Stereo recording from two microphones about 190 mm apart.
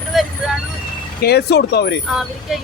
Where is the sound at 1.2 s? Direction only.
60° left (ahead or behind).